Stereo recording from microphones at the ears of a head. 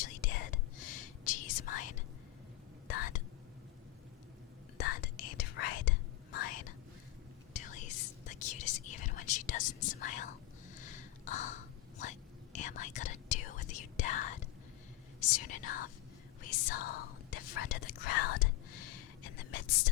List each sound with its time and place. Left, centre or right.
0.0 s whispering: left
4.8 s whispering: left